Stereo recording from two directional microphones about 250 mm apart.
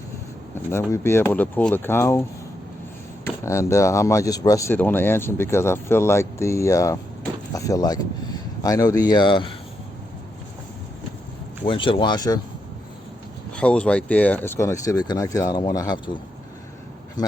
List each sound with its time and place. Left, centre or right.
0.5 s speech: centre
3.2 s speech: centre
11.6 s speech: centre
13.6 s speech: centre